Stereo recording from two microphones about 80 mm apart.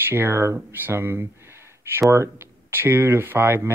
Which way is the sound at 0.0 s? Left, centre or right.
Right.